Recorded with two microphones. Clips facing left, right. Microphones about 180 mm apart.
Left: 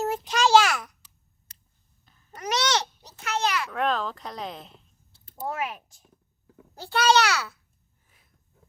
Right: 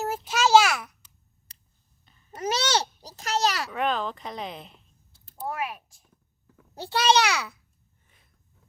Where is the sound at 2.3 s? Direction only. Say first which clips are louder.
Even; 25° right (ahead or behind).